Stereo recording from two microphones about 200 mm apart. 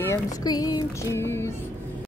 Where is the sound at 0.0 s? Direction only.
15° left (ahead or behind).